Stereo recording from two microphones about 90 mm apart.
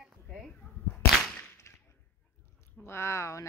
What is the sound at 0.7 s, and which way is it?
Whip, 20° left (ahead or behind).